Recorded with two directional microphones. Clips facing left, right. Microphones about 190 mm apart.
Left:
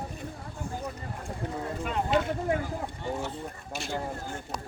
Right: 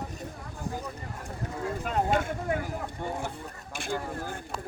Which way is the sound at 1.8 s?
45° right (ahead or behind).